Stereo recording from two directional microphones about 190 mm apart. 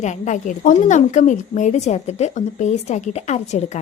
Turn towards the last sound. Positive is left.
turn(degrees=35)  # may be behind; listen again after turning